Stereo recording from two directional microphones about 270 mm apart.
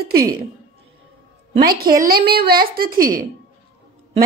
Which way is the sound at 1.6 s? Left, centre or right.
Right.